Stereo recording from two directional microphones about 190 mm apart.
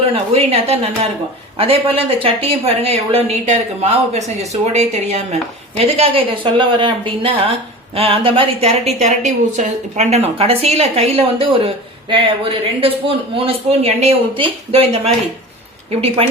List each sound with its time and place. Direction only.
0.1 s a woman's voice: 30° right (ahead or behind)